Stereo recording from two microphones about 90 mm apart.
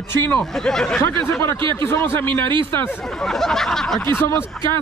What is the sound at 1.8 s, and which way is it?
Speech, 30° left (ahead or behind).